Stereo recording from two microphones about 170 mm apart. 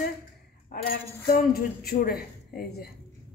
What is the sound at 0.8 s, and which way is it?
A woman's voice, 65° left (ahead or behind).